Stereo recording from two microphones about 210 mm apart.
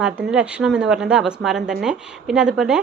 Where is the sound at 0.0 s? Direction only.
5° right (ahead or behind).